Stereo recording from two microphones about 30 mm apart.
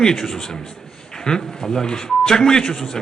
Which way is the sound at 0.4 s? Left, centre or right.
Centre.